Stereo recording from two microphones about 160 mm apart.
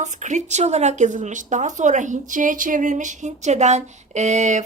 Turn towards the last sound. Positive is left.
turn(degrees=-50)  # may be behind; listen again after turning